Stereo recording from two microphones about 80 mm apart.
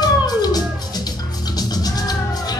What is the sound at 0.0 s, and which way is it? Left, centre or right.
Music, left.